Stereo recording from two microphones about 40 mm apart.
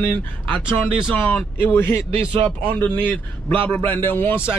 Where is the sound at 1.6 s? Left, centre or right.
Left.